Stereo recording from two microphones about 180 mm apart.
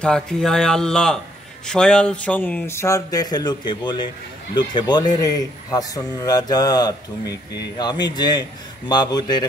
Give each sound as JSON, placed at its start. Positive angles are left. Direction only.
{"t": 0.0, "sound": "speech", "side_deg": 5}